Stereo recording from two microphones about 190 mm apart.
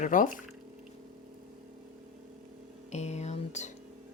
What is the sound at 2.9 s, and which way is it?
Speech, 35° left (ahead or behind).